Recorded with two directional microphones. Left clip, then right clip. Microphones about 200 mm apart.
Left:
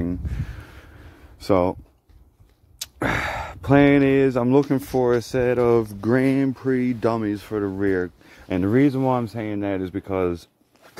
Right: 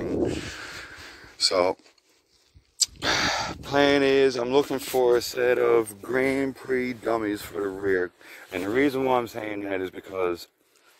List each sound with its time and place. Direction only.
0.6 s crow: 15° right (ahead or behind)
1.4 s speech: 10° right (ahead or behind)
3.0 s speech: 5° left (ahead or behind); by 8.1 s 15° right (ahead or behind)
8.5 s speech: 5° right (ahead or behind)